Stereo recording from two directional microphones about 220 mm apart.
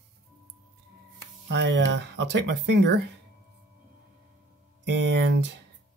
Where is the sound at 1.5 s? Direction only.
55° right (ahead or behind).